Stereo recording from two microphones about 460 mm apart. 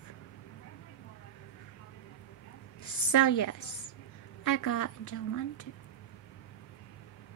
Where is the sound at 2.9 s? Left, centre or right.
Left.